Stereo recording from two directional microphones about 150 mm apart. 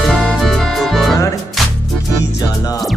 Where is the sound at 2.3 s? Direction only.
25° left (ahead or behind).